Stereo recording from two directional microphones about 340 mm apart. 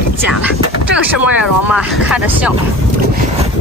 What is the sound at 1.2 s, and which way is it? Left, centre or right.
Speech, centre.